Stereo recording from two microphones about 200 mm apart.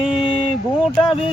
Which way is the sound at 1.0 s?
25° left (ahead or behind).